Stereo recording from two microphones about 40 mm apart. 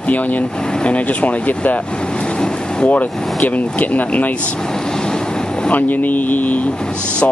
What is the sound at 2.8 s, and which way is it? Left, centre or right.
Speech, left.